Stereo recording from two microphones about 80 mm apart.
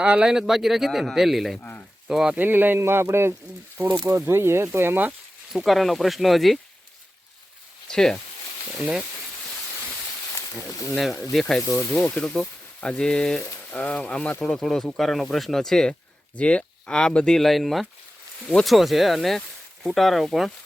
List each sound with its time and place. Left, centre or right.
0.0 s speech: centre
2.3 s speech: right
5.5 s speech: centre
7.9 s speech: centre
8.8 s speech: centre
10.7 s speech: left
10.9 s speech: centre
11.7 s speech: left; by 20.5 s centre